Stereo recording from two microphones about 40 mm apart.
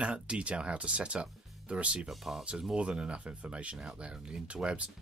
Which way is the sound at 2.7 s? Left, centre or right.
Right.